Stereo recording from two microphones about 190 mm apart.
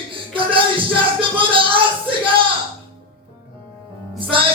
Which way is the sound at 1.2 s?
25° right (ahead or behind).